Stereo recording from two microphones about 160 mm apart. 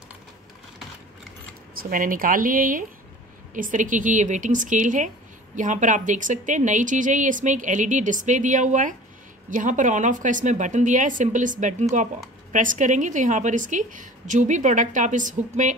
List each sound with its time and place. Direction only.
1.8 s a woman's voice: 60° right (ahead or behind)